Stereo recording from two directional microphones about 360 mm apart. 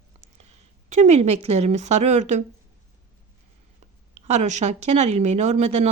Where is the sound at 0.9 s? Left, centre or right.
Centre.